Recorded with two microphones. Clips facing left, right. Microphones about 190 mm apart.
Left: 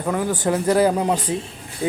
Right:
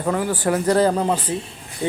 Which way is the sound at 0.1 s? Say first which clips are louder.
Even; 15° left (ahead or behind).